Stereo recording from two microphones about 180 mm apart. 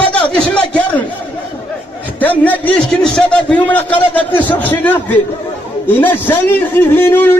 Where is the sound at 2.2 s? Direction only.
10° left (ahead or behind).